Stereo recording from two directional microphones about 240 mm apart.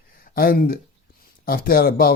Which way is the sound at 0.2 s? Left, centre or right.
Left.